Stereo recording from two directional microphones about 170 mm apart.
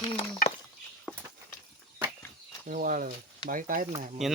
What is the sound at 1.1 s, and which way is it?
Walk, centre (ahead or behind).